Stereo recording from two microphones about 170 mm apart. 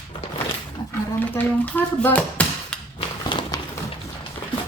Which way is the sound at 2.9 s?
25° left (ahead or behind).